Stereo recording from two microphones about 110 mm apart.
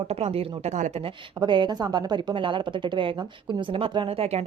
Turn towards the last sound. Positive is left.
turn(degrees=-65)  # may be behind; listen again after turning